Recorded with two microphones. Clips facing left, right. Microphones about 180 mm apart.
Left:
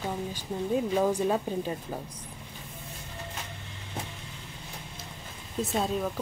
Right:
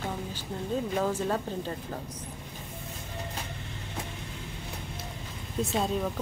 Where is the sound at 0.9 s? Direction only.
15° left (ahead or behind).